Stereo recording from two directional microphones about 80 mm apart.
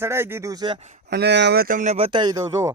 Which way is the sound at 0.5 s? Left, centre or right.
Right.